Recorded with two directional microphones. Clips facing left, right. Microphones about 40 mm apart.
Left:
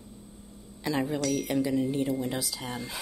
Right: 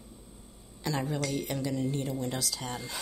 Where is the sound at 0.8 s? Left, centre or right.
Centre.